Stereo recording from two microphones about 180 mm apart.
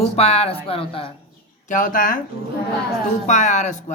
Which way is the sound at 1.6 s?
45° left (ahead or behind).